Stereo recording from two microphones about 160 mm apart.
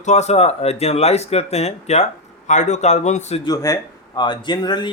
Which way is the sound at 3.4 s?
20° left (ahead or behind).